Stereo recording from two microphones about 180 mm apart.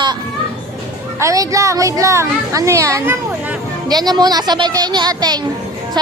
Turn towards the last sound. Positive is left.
turn(degrees=-20)  # may be behind; listen again after turning